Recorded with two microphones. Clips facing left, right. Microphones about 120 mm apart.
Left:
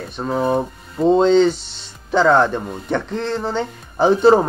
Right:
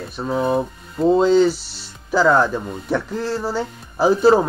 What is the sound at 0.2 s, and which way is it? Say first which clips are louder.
Speech: left 1 dB; centre (ahead or behind).